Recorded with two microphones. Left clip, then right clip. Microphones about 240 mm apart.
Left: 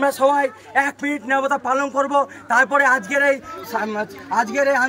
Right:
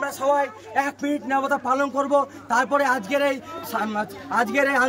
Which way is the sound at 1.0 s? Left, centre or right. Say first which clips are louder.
Left 3 dB; centre.